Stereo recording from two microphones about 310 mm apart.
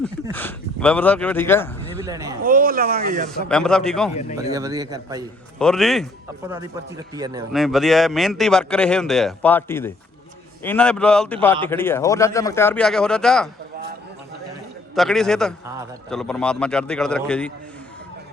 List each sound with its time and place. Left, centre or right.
0.0 s speech: centre
2.0 s a man's voice: centre
2.4 s speech: right
3.2 s speech: centre
4.1 s speech: left
4.5 s a man's voice: centre
5.5 s speech: centre
6.5 s a man's voice: centre
7.5 s speech: centre
14.9 s speech: centre